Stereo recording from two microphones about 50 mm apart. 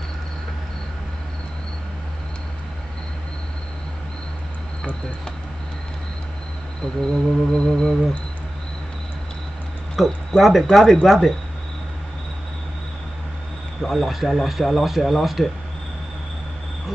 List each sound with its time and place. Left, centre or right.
6.8 s insect: centre
9.9 s speech: centre
13.7 s speech: centre